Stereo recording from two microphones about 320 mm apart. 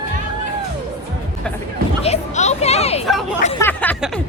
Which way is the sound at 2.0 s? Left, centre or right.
Left.